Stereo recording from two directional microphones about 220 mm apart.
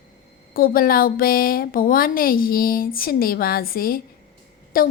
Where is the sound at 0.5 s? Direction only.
40° left (ahead or behind).